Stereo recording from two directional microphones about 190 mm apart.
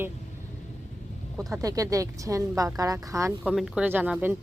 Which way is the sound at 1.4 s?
Centre (ahead or behind).